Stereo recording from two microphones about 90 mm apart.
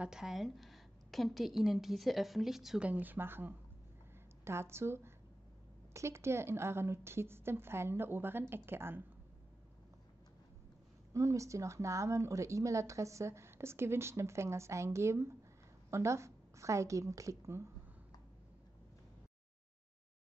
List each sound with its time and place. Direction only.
0.0 s a woman's voice: 5° right (ahead or behind)
2.9 s a woman's voice: 20° right (ahead or behind)
11.1 s a woman's voice: 35° right (ahead or behind)